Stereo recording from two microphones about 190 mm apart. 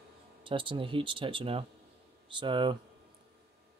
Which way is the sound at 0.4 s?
25° right (ahead or behind).